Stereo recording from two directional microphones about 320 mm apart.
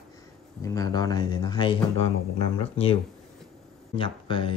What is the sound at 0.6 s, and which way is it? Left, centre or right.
Speech, centre.